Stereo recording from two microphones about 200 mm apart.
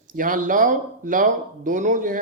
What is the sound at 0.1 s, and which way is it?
Speech, 45° right (ahead or behind).